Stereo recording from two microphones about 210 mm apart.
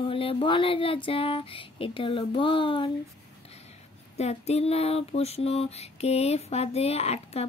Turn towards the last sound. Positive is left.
turn(degrees=30)  # may be behind; listen again after turning